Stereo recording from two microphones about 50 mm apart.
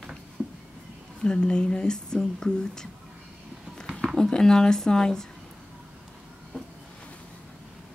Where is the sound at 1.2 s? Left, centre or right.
Centre.